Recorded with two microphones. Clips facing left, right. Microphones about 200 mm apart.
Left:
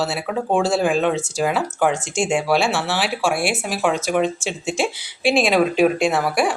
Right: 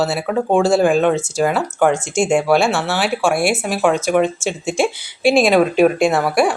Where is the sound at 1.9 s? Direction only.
45° right (ahead or behind).